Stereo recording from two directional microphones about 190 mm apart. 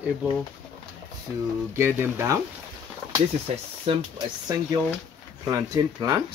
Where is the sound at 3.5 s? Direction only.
35° right (ahead or behind).